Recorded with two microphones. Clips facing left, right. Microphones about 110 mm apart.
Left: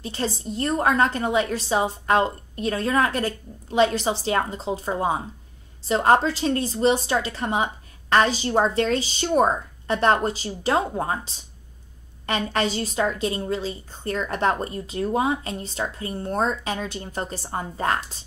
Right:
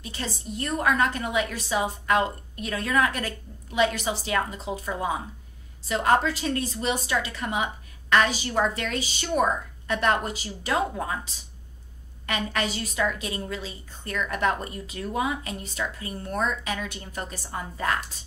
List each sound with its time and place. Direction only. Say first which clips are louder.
0.0 s a woman's voice: left 6 dB; 30° left (ahead or behind)